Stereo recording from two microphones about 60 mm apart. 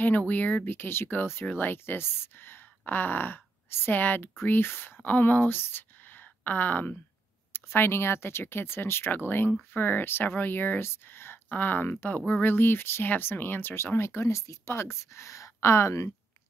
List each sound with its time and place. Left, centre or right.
0.0 s speech: left
7.5 s speech: left
11.5 s speech: left
13.9 s a woman's voice: left